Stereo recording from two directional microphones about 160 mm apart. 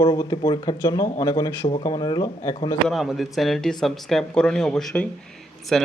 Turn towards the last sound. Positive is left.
turn(degrees=0)  # may be behind; listen again after turning